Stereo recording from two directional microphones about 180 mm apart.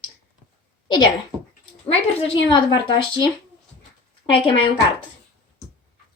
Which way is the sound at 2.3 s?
25° left (ahead or behind).